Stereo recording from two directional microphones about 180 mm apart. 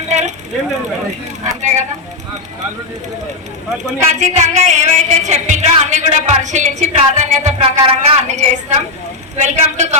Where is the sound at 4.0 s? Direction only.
40° right (ahead or behind).